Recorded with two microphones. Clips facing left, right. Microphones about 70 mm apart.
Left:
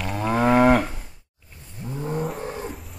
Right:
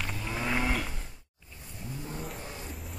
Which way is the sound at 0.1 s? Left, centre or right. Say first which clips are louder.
Left 16 dB; left.